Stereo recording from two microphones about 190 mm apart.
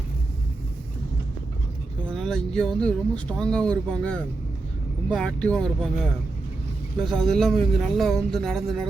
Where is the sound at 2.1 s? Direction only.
5° left (ahead or behind).